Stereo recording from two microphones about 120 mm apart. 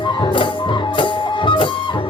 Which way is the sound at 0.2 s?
45° left (ahead or behind).